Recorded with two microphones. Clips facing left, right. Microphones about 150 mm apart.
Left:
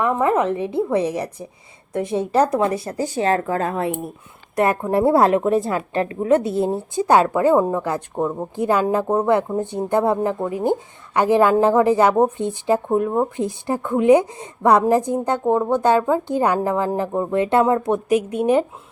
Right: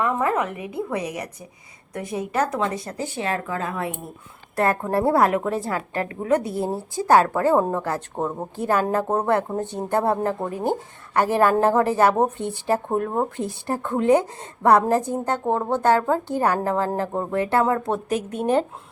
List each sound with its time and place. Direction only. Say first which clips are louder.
0.0 s a woman's voice: left 4 dB; 25° left (ahead or behind); by 3.8 s 40° left (ahead or behind)
4.5 s a woman's voice: left 3 dB; 15° left (ahead or behind)
8.1 s a woman's voice: left 4 dB; centre (ahead or behind)
8.5 s a woman's voice: left 3 dB; 15° left (ahead or behind)